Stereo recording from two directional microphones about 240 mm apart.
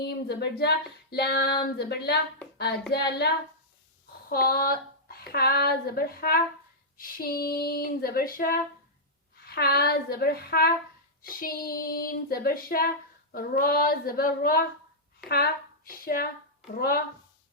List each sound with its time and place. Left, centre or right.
0.0 s a woman's voice: left
4.3 s speech: left
6.9 s child singing: left
15.3 s speech: left
16.7 s child singing: left